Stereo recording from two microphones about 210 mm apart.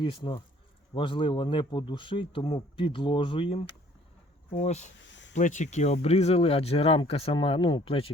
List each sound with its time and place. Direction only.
0.0 s speech: 25° left (ahead or behind)
5.0 s a sound: 60° left (ahead or behind)
5.3 s speech: 35° left (ahead or behind)